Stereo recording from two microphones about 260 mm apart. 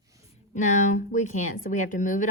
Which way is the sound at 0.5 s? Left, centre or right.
Left.